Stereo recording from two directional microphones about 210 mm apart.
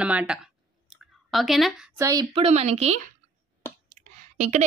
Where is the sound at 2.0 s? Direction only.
15° right (ahead or behind).